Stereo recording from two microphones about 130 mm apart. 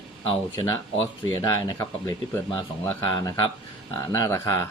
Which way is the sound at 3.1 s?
35° left (ahead or behind).